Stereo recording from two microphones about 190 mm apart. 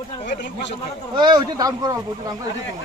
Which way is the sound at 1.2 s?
25° right (ahead or behind).